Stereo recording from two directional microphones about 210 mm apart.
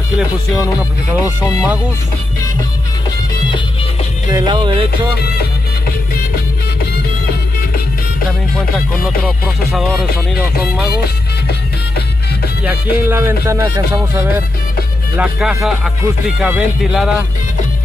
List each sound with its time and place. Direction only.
0.6 s speech: 15° left (ahead or behind)
4.3 s music: 20° right (ahead or behind)
5.4 s music: 45° left (ahead or behind)
8.7 s speech: centre (ahead or behind)
12.9 s music: 10° right (ahead or behind)
15.1 s speech: centre (ahead or behind)